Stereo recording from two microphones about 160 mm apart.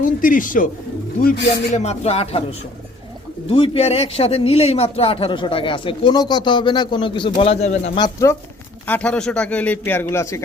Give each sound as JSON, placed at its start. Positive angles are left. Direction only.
{"t": 0.0, "sound": "speech", "side_deg": 55}
{"t": 1.7, "sound": "a man's voice", "side_deg": 45}
{"t": 3.5, "sound": "a man's voice", "side_deg": 35}
{"t": 7.9, "sound": "speech", "side_deg": 20}
{"t": 8.9, "sound": "a man's voice", "side_deg": 5}